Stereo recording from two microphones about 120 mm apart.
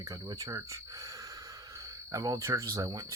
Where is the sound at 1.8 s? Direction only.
30° right (ahead or behind).